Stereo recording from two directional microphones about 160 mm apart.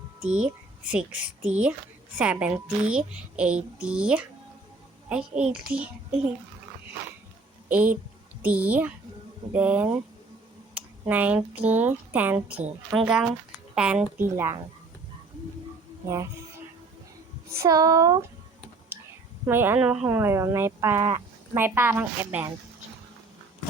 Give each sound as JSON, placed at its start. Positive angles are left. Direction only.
{"t": 0.2, "sound": "a child's voice", "side_deg": -5}
{"t": 7.7, "sound": "a child's voice", "side_deg": -10}
{"t": 11.0, "sound": "a child's voice", "side_deg": -10}
{"t": 16.0, "sound": "speech", "side_deg": -20}
{"t": 17.5, "sound": "speech", "side_deg": -20}
{"t": 19.5, "sound": "a child's voice", "side_deg": -15}